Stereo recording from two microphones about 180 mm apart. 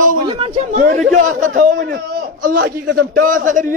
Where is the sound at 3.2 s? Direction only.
45° right (ahead or behind).